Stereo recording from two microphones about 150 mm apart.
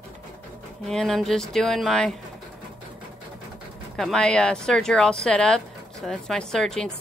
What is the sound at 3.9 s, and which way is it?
A woman's voice, 5° left (ahead or behind).